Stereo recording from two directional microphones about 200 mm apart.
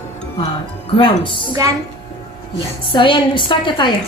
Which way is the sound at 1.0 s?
25° left (ahead or behind).